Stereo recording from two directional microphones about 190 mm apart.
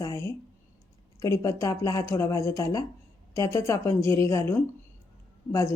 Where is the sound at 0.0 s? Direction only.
15° left (ahead or behind).